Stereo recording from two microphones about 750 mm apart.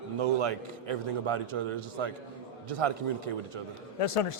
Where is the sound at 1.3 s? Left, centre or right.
Right.